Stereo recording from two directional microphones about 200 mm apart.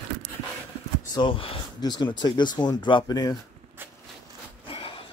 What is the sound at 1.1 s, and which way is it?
Speech, 25° left (ahead or behind).